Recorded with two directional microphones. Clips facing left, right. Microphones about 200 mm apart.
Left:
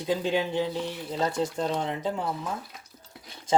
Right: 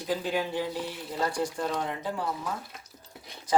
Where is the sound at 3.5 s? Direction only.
25° left (ahead or behind).